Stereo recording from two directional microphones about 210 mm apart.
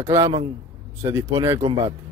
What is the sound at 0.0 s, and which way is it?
Speech, 15° right (ahead or behind).